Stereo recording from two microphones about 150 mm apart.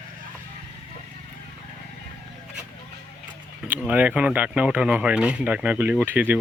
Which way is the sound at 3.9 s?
10° right (ahead or behind).